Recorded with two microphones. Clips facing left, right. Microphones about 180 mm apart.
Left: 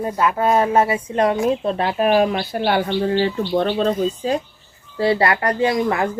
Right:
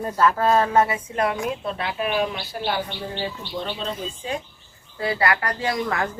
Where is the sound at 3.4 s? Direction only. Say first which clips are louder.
Left 11 dB; 55° left (ahead or behind); by 4.4 s 40° left (ahead or behind).